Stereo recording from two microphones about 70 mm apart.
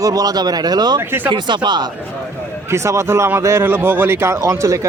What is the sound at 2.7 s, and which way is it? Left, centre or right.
Speech, right.